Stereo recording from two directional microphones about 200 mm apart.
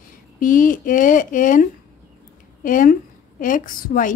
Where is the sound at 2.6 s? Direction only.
40° left (ahead or behind).